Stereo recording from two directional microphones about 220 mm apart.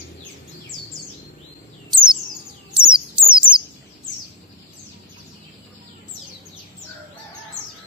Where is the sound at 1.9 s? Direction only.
20° right (ahead or behind).